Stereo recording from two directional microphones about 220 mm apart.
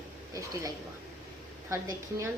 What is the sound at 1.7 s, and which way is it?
Speech, 15° right (ahead or behind).